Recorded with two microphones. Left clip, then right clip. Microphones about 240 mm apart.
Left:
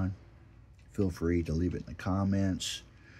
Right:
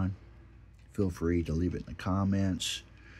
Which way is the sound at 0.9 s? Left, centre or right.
Centre.